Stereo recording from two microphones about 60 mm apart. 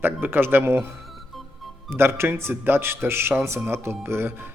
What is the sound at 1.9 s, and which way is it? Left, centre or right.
Speech, right.